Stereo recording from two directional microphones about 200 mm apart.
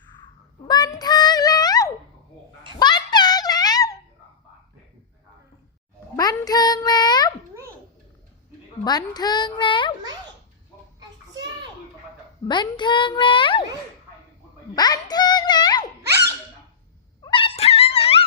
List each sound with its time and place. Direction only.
0.9 s music: 20° left (ahead or behind)
2.7 s a sound: 20° left (ahead or behind)
6.1 s a sound: 20° left (ahead or behind)
8.8 s a woman's voice: 20° left (ahead or behind)
12.5 s a woman's voice: 20° left (ahead or behind)
14.8 s child singing: 20° left (ahead or behind)
17.2 s dog: 25° left (ahead or behind)